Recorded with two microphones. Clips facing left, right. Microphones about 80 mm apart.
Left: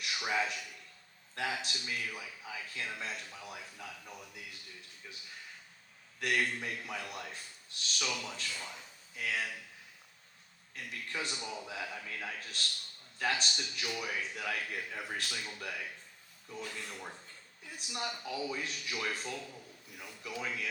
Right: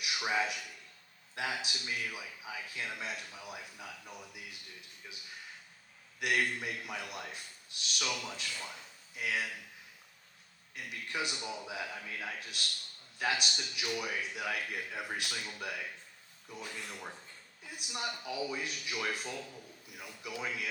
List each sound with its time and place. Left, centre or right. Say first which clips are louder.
0.0 s a man's voice: right 1 dB; centre
10.8 s a man's voice: right 2 dB; centre